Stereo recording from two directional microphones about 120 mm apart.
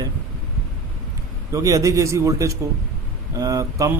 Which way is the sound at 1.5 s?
25° right (ahead or behind).